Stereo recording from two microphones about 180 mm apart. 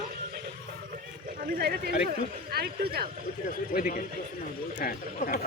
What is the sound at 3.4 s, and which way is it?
Speech, 50° left (ahead or behind).